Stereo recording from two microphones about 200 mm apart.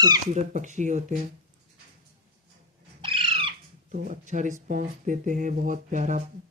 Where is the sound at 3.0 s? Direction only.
25° right (ahead or behind).